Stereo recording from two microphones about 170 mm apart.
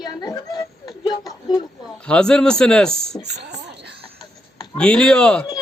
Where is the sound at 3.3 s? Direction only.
75° right (ahead or behind).